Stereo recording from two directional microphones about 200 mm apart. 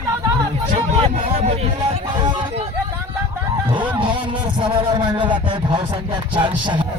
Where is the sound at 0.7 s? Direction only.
30° right (ahead or behind).